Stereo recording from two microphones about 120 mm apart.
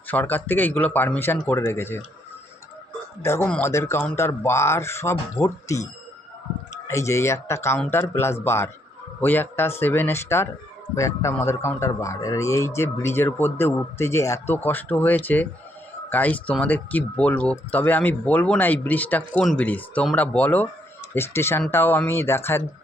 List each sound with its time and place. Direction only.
0.1 s speech: 15° left (ahead or behind)
3.2 s a man's voice: 20° left (ahead or behind)
6.8 s a man's voice: 25° left (ahead or behind)